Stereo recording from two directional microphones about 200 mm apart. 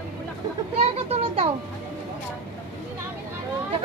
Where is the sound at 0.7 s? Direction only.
30° right (ahead or behind).